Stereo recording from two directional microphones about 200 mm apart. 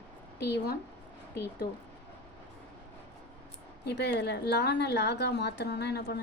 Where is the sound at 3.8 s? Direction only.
55° left (ahead or behind).